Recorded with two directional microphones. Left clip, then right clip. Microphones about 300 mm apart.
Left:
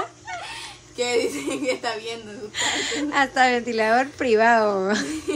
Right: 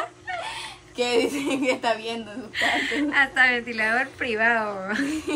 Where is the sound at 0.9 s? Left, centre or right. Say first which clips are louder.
Even; right.